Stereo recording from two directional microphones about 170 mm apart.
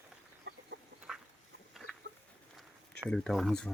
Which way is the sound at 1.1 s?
5° right (ahead or behind).